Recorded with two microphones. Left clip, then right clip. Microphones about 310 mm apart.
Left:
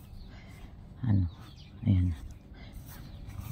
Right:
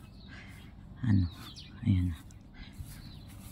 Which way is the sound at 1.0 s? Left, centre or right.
Centre.